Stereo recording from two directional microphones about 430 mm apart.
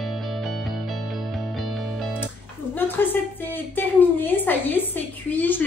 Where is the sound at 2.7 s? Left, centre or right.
Centre.